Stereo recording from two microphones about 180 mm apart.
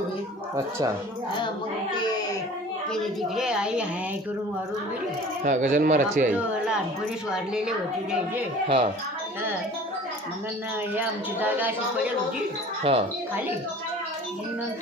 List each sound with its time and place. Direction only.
2.9 s a woman's voice: 5° right (ahead or behind)
5.4 s speech: 40° right (ahead or behind)
7.2 s a woman's voice: 5° right (ahead or behind)
8.6 s speech: 30° right (ahead or behind)
11.0 s speech: 10° right (ahead or behind)
12.9 s speech: 35° right (ahead or behind)